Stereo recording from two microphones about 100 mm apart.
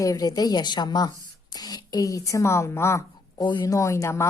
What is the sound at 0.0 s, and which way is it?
A woman's voice, 35° left (ahead or behind).